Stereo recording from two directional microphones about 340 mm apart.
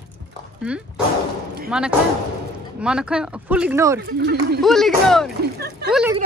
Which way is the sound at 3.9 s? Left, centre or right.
Right.